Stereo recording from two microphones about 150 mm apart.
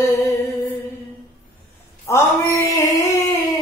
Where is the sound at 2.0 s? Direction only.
20° left (ahead or behind).